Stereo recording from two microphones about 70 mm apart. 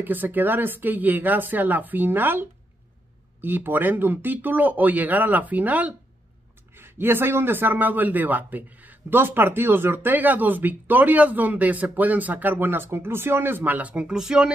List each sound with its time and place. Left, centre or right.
0.0 s a man's voice: right
6.8 s a man's voice: right
14.1 s speech: centre